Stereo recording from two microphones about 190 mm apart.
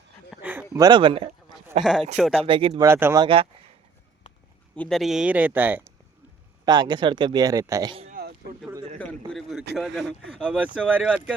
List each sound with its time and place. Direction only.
0.4 s a sound: 10° right (ahead or behind)
0.8 s speech: 25° right (ahead or behind)
1.8 s speech: 5° right (ahead or behind)
2.4 s speech: 30° right (ahead or behind)
2.8 s speech: 15° right (ahead or behind)
3.2 s speech: 30° right (ahead or behind)
4.7 s speech: 5° left (ahead or behind)
6.7 s speech: 20° right (ahead or behind)
9.3 s a sound: centre (ahead or behind)
9.7 s speech: centre (ahead or behind)